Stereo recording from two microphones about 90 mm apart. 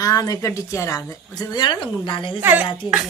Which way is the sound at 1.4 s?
50° left (ahead or behind).